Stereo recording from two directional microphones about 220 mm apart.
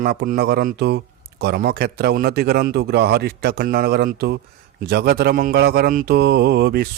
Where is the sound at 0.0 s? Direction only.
45° right (ahead or behind).